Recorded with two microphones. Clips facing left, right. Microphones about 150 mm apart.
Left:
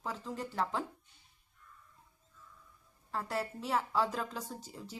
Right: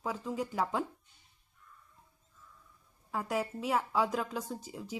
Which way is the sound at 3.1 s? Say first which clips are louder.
Right 3 dB; 10° right (ahead or behind).